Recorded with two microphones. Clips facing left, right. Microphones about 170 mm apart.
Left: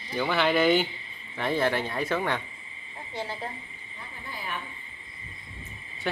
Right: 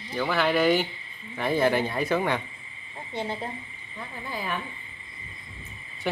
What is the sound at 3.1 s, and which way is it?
Speech, 20° right (ahead or behind).